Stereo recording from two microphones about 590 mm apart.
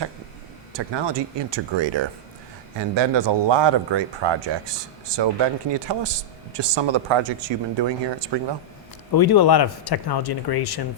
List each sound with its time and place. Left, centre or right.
0.7 s speech: right
9.1 s speech: left